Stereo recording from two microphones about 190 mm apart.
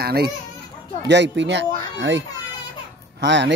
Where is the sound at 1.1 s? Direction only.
65° right (ahead or behind).